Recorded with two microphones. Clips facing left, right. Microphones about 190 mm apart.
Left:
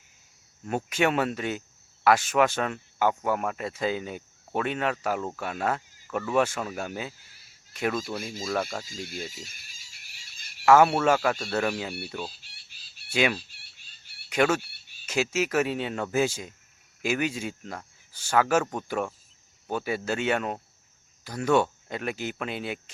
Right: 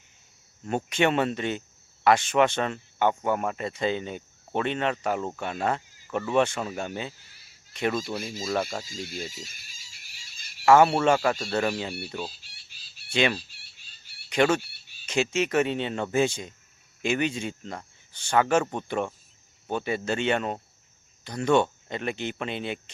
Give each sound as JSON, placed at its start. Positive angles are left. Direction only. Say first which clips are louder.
{"t": 0.9, "sound": "speech", "louder": "right 1 dB", "side_deg": 5}
{"t": 8.8, "sound": "speech", "louder": "right 1 dB", "side_deg": 55}
{"t": 9.3, "sound": "a sound", "louder": "right 1 dB", "side_deg": 55}
{"t": 10.7, "sound": "speech", "louder": "right 1 dB", "side_deg": 5}
{"t": 12.4, "sound": "chicken", "louder": "right 1 dB", "side_deg": 55}
{"t": 13.1, "sound": "speech", "louder": "right 1 dB", "side_deg": 5}
{"t": 13.4, "sound": "a sound", "louder": "right 1 dB", "side_deg": 55}
{"t": 14.3, "sound": "speech", "louder": "right 1 dB", "side_deg": 5}
{"t": 14.6, "sound": "a sound", "louder": "even", "side_deg": 55}
{"t": 15.0, "sound": "speech", "louder": "right 1 dB", "side_deg": 5}